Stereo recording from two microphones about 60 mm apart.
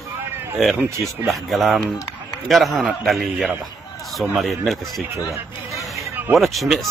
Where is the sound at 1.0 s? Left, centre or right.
Centre.